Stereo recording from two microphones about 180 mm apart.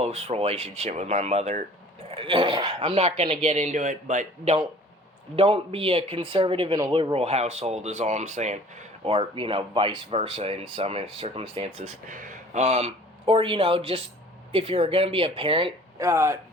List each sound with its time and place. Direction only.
0.0 s speech: 35° right (ahead or behind)
2.9 s speech: 35° right (ahead or behind)
5.4 s speech: 30° right (ahead or behind)
12.0 s speech: 45° right (ahead or behind); by 15.7 s 30° right (ahead or behind)
16.0 s speech: 15° right (ahead or behind)